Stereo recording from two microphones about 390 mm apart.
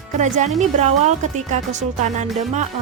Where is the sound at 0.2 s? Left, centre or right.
Centre.